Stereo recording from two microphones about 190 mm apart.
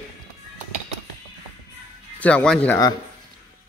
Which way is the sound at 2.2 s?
5° left (ahead or behind).